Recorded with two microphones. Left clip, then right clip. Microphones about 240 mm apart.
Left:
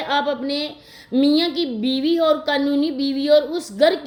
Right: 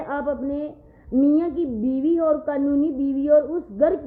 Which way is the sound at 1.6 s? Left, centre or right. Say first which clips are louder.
Left 2 dB; left.